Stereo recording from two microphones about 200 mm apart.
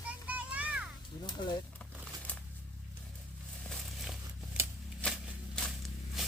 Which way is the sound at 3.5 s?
Centre (ahead or behind).